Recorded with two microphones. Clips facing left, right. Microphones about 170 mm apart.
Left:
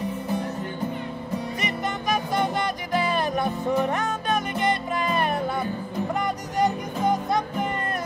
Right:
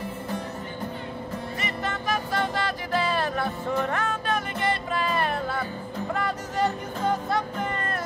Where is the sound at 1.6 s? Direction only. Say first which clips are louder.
Left 2 dB; 15° left (ahead or behind).